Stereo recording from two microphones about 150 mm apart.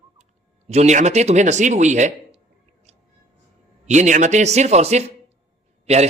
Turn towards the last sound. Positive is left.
turn(degrees=-45)  # may be behind; listen again after turning